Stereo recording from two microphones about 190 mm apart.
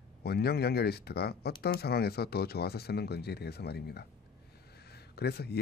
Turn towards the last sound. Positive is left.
turn(degrees=60)  # may be behind; listen again after turning